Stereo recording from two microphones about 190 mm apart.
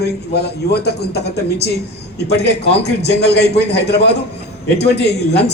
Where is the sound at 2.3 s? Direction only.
60° left (ahead or behind).